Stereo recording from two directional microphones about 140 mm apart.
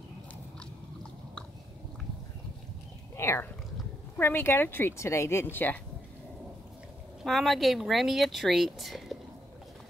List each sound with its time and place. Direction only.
3.2 s speech: 20° left (ahead or behind)
7.2 s speech: centre (ahead or behind)